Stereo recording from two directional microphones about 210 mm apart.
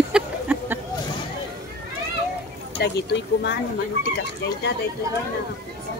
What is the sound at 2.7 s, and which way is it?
Speech, 55° left (ahead or behind).